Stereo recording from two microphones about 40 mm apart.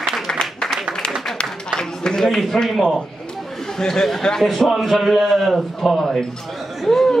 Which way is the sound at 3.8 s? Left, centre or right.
Centre.